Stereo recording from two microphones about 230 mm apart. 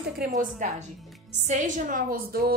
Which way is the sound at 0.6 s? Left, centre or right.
Right.